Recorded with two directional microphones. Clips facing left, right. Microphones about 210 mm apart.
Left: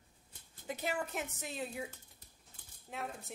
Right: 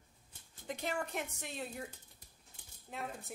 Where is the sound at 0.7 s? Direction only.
5° left (ahead or behind).